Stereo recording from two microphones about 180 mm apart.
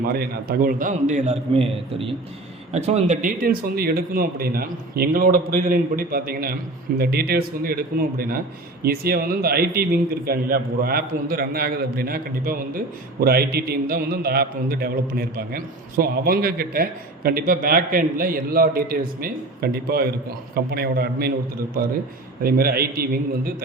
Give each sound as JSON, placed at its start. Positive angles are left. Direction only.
{"t": 0.1, "sound": "a man's voice", "side_deg": -60}
{"t": 8.8, "sound": "a man's voice", "side_deg": -55}
{"t": 22.4, "sound": "a man's voice", "side_deg": -55}